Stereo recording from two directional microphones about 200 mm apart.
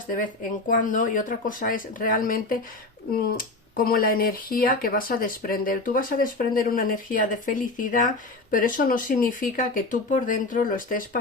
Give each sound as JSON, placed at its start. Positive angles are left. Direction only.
{"t": 0.7, "sound": "speech", "side_deg": 40}